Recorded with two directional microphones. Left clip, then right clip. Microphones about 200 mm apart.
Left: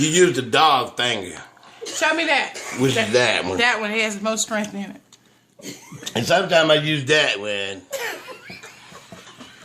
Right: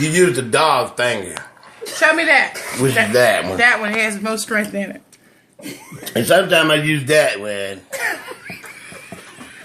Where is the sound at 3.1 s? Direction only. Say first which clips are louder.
Right 5 dB; 15° left (ahead or behind).